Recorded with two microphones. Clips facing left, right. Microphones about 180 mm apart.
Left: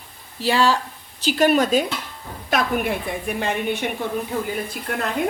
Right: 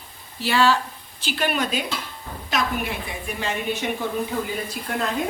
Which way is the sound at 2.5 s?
55° left (ahead or behind).